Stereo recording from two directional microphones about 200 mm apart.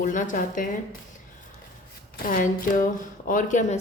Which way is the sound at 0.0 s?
40° left (ahead or behind).